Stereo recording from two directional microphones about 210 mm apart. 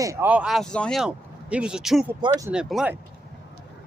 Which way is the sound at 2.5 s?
5° right (ahead or behind).